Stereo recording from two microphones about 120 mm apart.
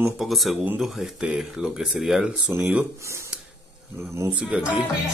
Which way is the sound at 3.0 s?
25° right (ahead or behind).